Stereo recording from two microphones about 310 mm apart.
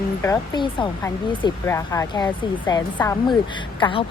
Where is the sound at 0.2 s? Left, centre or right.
Centre.